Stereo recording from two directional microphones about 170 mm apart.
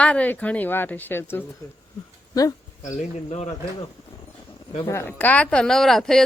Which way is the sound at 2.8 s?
40° left (ahead or behind).